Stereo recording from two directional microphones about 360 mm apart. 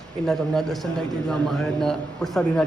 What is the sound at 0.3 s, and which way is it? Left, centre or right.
A man's voice, centre.